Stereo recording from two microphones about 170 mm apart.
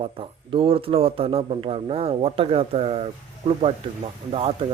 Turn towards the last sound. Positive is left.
turn(degrees=-35)  # may be behind; listen again after turning